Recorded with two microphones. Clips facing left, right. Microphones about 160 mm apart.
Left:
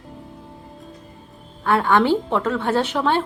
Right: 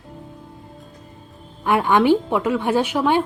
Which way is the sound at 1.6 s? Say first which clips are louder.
Right 1 dB; 15° right (ahead or behind).